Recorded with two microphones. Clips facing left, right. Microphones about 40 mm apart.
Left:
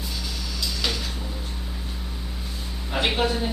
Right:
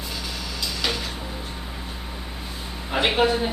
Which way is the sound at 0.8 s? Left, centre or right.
Centre.